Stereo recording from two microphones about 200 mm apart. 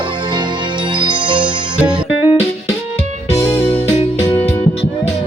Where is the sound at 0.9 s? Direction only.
25° right (ahead or behind).